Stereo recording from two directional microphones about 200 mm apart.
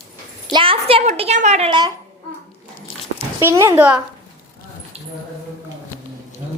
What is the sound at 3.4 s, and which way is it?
Speech, 15° right (ahead or behind).